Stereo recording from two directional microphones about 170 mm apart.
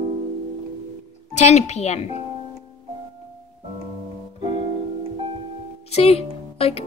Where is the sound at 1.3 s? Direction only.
40° left (ahead or behind).